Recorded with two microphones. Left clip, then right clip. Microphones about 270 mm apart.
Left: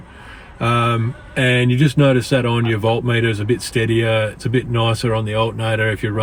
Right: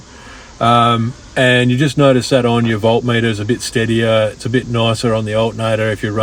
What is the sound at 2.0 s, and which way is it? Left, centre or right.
Speech, centre.